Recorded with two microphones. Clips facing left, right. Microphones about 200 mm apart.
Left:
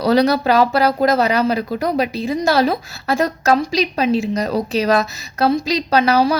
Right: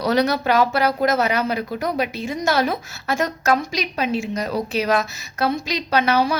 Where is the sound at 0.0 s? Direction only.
35° left (ahead or behind).